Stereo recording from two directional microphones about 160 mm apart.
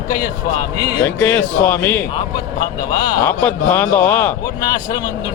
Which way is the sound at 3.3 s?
10° left (ahead or behind).